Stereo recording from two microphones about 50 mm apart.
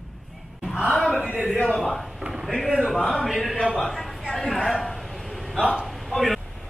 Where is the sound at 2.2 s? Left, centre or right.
Centre.